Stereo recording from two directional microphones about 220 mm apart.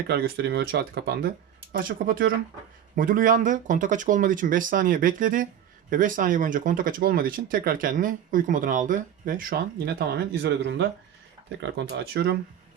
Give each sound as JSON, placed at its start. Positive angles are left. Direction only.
{"t": 0.1, "sound": "speech", "side_deg": -50}